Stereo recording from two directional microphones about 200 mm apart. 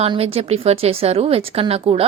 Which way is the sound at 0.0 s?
30° right (ahead or behind).